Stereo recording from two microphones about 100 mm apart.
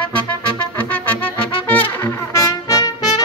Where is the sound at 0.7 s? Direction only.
20° left (ahead or behind).